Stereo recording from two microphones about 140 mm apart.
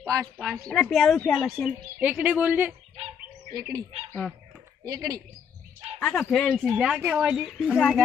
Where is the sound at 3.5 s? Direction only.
25° right (ahead or behind).